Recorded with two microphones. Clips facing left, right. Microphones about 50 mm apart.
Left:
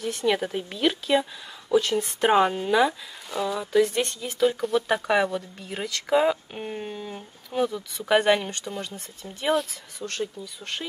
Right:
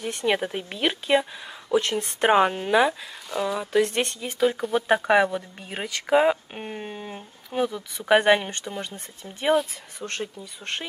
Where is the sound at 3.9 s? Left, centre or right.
Right.